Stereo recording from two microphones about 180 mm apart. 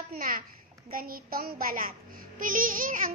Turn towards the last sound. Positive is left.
turn(degrees=-50)  # may be behind; listen again after turning